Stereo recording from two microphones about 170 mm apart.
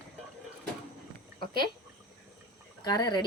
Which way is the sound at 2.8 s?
25° left (ahead or behind).